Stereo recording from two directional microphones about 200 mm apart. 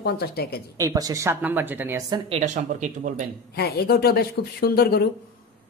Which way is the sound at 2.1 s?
30° right (ahead or behind).